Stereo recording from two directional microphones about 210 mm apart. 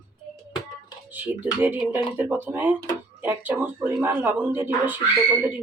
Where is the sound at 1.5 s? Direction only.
5° right (ahead or behind).